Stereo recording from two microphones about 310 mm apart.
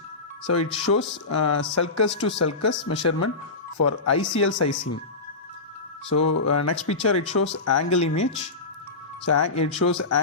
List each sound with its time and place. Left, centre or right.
0.4 s speech: left
6.1 s speech: left
8.0 s speech: left
9.2 s speech: left